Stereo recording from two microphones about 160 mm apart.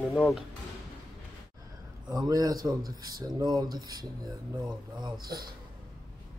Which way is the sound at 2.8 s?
65° right (ahead or behind).